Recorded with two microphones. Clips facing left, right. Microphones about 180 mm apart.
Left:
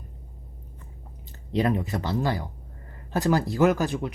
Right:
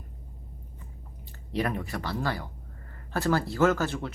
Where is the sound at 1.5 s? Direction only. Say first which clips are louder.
Left 5 dB; 20° left (ahead or behind).